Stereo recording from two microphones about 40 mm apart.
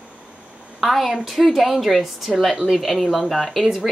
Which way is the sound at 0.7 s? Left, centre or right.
Centre.